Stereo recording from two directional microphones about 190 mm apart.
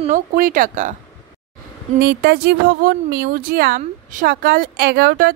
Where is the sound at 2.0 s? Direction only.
55° right (ahead or behind).